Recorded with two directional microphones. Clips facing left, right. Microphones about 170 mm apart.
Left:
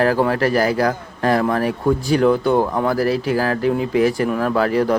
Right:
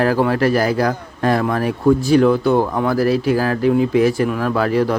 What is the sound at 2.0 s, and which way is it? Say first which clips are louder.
Speech: right 2 dB; 15° left (ahead or behind).